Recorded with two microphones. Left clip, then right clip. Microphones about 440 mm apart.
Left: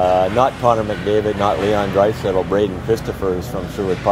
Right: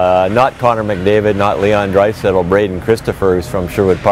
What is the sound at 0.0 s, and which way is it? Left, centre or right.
Speech, right.